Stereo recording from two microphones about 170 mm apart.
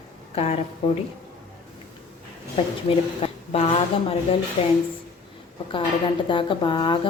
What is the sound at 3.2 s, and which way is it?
A woman's voice, 35° left (ahead or behind).